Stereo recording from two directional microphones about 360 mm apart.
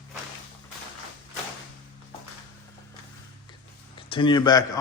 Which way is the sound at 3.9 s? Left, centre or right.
Centre.